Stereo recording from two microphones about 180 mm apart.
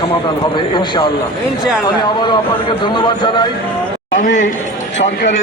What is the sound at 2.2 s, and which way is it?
A man's voice, 25° left (ahead or behind).